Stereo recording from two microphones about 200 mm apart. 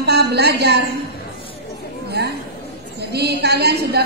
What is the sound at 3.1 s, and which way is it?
Speech, 55° right (ahead or behind).